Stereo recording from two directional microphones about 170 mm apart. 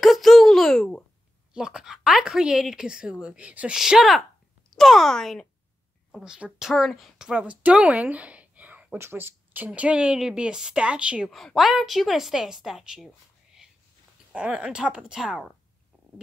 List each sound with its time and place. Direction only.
0.0 s a sound: centre (ahead or behind)
1.5 s speech: 5° right (ahead or behind)
14.3 s speech: 5° right (ahead or behind)